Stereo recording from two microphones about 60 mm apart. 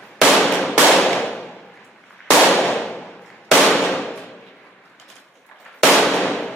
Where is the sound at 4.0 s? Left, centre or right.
Centre.